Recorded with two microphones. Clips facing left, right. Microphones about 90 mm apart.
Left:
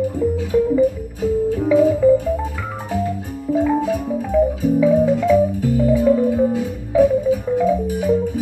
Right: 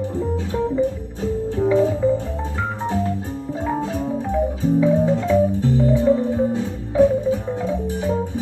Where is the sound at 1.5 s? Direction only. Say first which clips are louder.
Left 1 dB; 25° right (ahead or behind).